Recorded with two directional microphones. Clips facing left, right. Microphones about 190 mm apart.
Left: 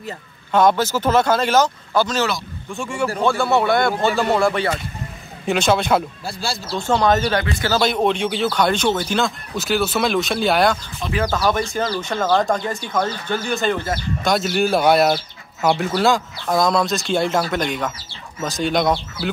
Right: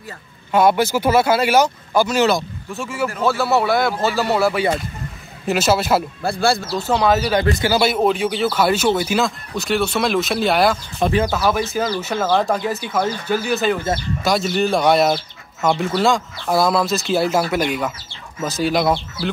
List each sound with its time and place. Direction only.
0.5 s speech: 10° right (ahead or behind)
6.2 s speech: 55° right (ahead or behind)
6.7 s speech: 5° right (ahead or behind)